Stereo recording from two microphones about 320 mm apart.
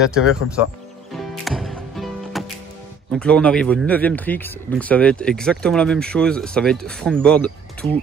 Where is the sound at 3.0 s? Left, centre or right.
Centre.